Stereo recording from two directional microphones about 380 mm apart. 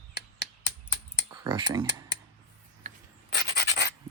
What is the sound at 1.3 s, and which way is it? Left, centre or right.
Speech, centre.